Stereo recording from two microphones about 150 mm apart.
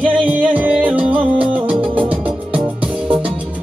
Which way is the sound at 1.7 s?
35° right (ahead or behind).